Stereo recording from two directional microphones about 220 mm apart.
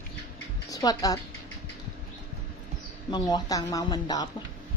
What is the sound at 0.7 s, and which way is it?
Speech, 15° left (ahead or behind).